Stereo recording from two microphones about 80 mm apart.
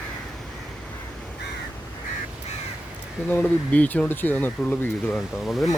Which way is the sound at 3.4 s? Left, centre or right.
Centre.